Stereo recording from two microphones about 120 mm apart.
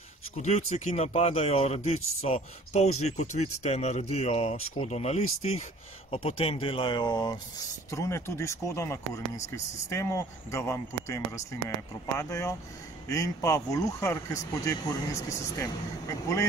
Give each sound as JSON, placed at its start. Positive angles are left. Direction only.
{"t": 0.4, "sound": "speech", "side_deg": 65}
{"t": 7.9, "sound": "speech", "side_deg": 25}